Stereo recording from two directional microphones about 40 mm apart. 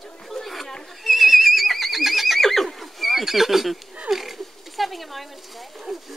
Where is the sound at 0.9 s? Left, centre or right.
Centre.